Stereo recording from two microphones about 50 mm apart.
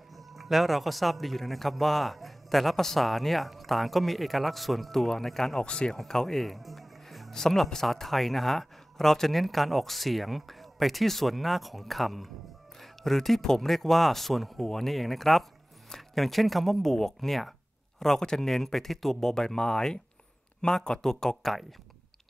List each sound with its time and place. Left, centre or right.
0.1 s speech: centre
5.6 s a man's voice: centre
5.9 s a man's voice: centre